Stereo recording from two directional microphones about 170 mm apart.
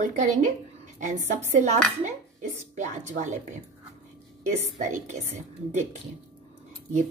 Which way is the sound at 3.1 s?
45° right (ahead or behind).